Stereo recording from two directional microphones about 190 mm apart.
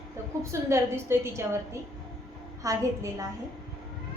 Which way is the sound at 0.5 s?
15° right (ahead or behind).